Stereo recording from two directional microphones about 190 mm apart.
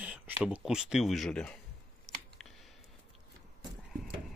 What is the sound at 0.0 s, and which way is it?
Speech, 5° right (ahead or behind).